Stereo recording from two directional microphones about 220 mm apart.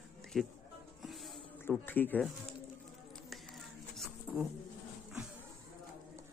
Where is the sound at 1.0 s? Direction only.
Centre (ahead or behind).